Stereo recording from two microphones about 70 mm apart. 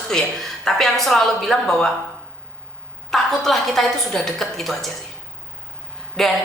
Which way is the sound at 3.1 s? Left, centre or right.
Centre.